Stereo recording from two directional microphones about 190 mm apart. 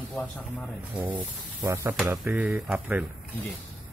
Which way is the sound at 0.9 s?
10° right (ahead or behind).